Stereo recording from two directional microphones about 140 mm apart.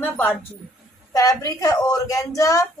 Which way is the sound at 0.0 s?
15° left (ahead or behind).